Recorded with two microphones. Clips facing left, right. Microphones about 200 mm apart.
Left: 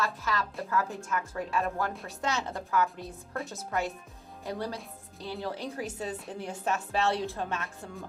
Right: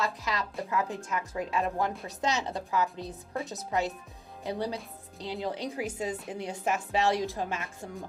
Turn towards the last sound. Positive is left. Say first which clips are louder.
# right 1 dB
turn(degrees=-15)  # may be behind; listen again after turning